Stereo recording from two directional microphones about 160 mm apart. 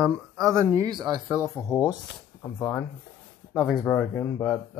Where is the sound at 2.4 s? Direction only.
10° left (ahead or behind).